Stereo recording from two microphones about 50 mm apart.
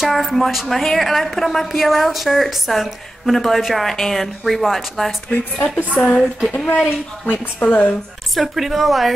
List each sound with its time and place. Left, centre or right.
0.0 s a woman's voice: centre
5.3 s speech: left
5.9 s a woman's voice: centre
8.4 s a woman's voice: centre